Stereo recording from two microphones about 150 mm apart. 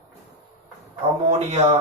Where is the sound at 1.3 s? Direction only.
50° right (ahead or behind).